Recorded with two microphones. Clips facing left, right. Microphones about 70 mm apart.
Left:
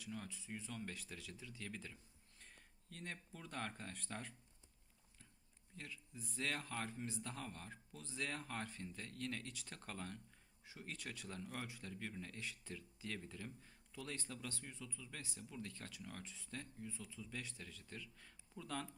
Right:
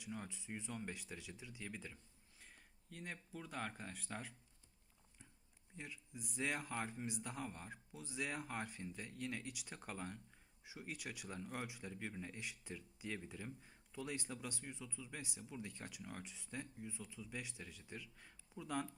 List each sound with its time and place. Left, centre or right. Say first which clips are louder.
0.0 s a man's voice: right 1 dB; centre
5.7 s a man's voice: right 1 dB; centre